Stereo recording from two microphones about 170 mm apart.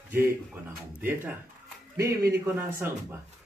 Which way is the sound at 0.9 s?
10° right (ahead or behind).